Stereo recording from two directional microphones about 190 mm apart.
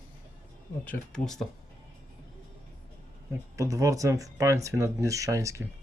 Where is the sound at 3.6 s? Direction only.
15° right (ahead or behind).